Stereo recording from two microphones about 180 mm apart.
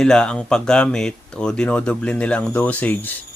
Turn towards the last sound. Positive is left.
turn(degrees=10)  # may be behind; listen again after turning